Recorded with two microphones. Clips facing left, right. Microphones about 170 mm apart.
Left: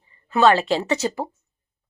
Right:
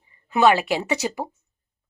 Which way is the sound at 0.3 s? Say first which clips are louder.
Left 1 dB; 15° right (ahead or behind).